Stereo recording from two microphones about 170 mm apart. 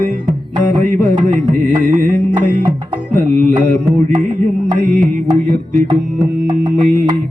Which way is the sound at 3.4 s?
50° right (ahead or behind).